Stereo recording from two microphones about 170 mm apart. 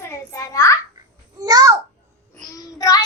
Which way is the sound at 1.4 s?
20° right (ahead or behind).